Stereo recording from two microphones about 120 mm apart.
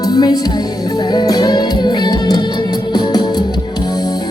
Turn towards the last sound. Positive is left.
turn(degrees=35)  # may be behind; listen again after turning